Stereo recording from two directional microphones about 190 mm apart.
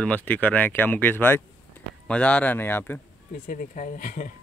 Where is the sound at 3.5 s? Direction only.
40° left (ahead or behind).